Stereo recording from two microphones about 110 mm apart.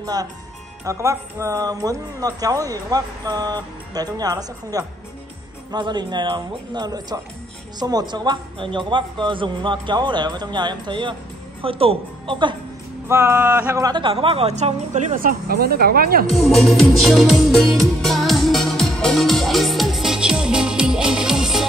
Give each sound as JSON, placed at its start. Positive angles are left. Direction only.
{"t": 0.0, "sound": "a man's voice", "side_deg": -35}
{"t": 11.6, "sound": "a man's voice", "side_deg": -55}
{"t": 13.1, "sound": "music", "side_deg": -20}
{"t": 13.7, "sound": "speech", "side_deg": -35}
{"t": 14.0, "sound": "speech", "side_deg": -55}
{"t": 16.3, "sound": "music", "side_deg": 0}